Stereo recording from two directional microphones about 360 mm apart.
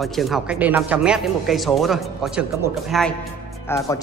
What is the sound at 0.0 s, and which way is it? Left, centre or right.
Speech, centre.